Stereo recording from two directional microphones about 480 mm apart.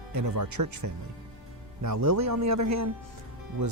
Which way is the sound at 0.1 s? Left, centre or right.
Right.